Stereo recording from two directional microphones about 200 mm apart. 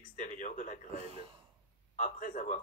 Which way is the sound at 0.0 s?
40° left (ahead or behind).